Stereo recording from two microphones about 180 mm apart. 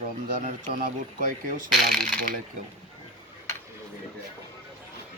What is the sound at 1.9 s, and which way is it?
Speech, centre (ahead or behind).